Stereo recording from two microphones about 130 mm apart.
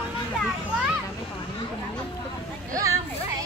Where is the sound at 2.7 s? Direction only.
25° right (ahead or behind).